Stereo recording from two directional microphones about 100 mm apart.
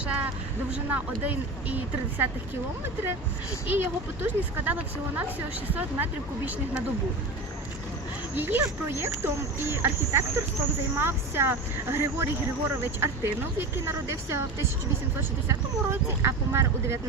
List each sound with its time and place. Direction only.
0.0 s speech: 10° right (ahead or behind)
3.7 s speech: 15° right (ahead or behind)
8.4 s speech: 20° right (ahead or behind)